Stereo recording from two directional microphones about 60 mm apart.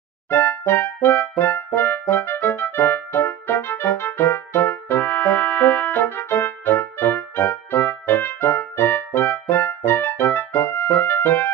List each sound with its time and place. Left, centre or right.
0.3 s music: left